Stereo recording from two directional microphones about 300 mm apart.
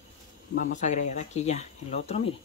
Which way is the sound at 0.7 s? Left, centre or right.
Left.